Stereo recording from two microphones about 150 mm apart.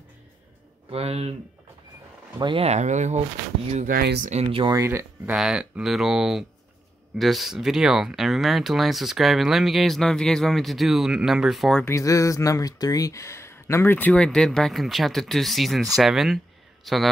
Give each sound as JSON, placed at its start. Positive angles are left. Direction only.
{"t": 0.8, "sound": "speech", "side_deg": -40}
{"t": 2.4, "sound": "speech", "side_deg": -40}
{"t": 3.9, "sound": "speech", "side_deg": -85}
{"t": 4.3, "sound": "speech", "side_deg": -40}
{"t": 4.7, "sound": "speech", "side_deg": -15}
{"t": 5.3, "sound": "speech", "side_deg": -5}
{"t": 11.8, "sound": "a man's voice", "side_deg": 20}